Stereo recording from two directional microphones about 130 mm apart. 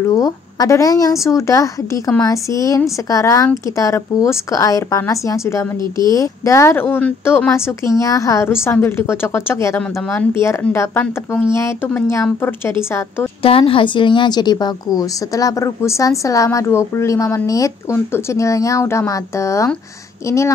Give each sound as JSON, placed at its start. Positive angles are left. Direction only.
{"t": 0.0, "sound": "a woman's voice", "side_deg": 25}
{"t": 5.8, "sound": "speech", "side_deg": -35}
{"t": 6.1, "sound": "a woman's voice", "side_deg": 25}
{"t": 13.4, "sound": "a woman's voice", "side_deg": 45}